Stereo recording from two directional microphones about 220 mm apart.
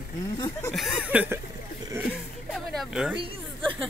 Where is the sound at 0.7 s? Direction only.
5° right (ahead or behind).